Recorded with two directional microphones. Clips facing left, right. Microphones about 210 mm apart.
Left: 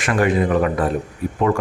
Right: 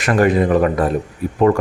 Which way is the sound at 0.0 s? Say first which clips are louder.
Right 3 dB; 40° right (ahead or behind).